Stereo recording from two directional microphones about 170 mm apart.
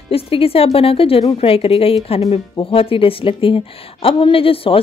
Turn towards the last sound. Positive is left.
turn(degrees=35)  # may be behind; listen again after turning